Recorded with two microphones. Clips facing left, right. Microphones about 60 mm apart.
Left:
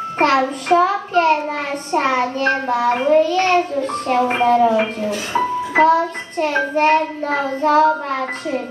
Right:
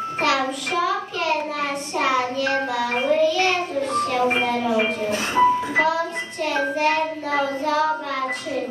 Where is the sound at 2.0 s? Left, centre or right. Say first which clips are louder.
Left 4 dB; left.